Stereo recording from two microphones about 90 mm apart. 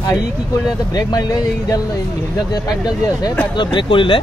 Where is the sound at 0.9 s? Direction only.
45° left (ahead or behind).